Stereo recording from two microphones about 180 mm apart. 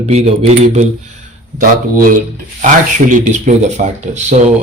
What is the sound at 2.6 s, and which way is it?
Speech, 45° right (ahead or behind).